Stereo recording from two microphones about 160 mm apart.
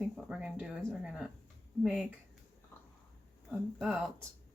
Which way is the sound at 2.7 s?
15° left (ahead or behind).